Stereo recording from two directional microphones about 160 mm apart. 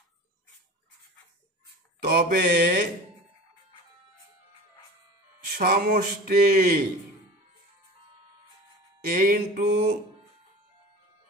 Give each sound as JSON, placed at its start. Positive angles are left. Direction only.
{"t": 2.0, "sound": "mantra", "side_deg": -70}
{"t": 5.6, "sound": "a sound", "side_deg": -70}
{"t": 9.0, "sound": "mantra", "side_deg": -60}